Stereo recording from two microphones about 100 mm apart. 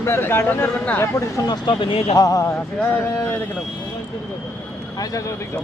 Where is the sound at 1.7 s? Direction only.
55° left (ahead or behind).